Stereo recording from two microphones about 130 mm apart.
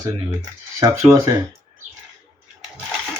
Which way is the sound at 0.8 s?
25° right (ahead or behind).